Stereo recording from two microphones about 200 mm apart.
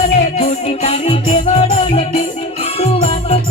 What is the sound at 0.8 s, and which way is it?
Music, 30° left (ahead or behind).